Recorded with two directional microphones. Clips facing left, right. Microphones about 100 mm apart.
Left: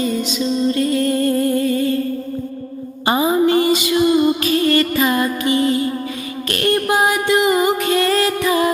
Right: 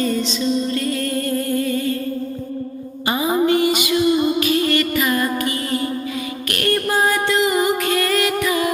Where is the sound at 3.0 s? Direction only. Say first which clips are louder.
Left 3 dB; 30° left (ahead or behind).